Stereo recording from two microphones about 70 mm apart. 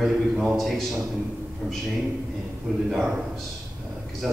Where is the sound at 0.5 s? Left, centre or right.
Centre.